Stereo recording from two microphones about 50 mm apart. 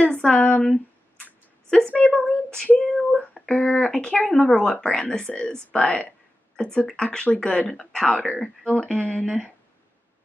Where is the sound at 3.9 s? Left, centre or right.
Centre.